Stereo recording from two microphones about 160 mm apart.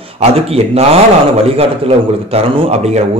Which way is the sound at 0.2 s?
40° right (ahead or behind).